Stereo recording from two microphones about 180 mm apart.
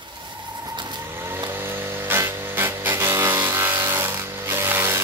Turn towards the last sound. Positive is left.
turn(degrees=-15)  # may be behind; listen again after turning